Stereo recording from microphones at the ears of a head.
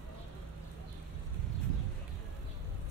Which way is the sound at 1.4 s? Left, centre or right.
Right.